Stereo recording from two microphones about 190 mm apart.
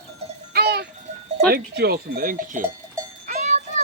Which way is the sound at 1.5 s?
55° right (ahead or behind).